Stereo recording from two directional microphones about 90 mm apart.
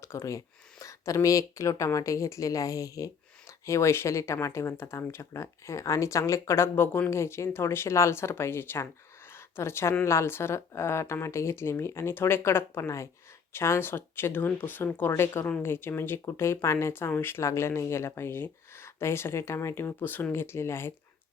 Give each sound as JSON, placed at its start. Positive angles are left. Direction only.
{"t": 0.0, "sound": "speech", "side_deg": 35}
{"t": 9.3, "sound": "a sound", "side_deg": 30}
{"t": 10.0, "sound": "speech", "side_deg": 30}